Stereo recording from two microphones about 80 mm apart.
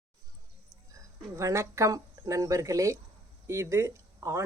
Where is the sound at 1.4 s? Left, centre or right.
Right.